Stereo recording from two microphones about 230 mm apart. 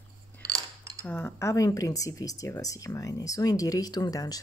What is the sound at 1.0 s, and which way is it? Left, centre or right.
Speech, centre.